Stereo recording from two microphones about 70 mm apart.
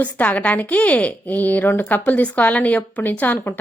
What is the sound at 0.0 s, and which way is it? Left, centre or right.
Speech, left.